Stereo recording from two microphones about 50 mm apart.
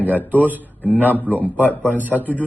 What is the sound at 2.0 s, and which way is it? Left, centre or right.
Speech, right.